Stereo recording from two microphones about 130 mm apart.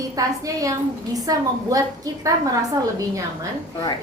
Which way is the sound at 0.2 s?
25° right (ahead or behind).